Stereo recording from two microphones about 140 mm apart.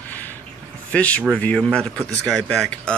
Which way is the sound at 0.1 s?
10° left (ahead or behind).